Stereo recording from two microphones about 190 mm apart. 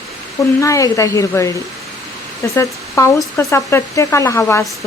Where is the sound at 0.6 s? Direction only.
15° left (ahead or behind).